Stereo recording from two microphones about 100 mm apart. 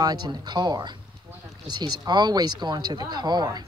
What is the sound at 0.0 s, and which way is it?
Speech, 45° right (ahead or behind).